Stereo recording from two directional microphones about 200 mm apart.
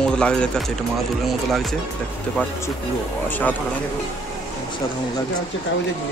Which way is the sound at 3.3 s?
10° left (ahead or behind).